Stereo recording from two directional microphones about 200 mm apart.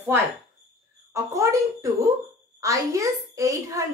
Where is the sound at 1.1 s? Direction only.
15° right (ahead or behind).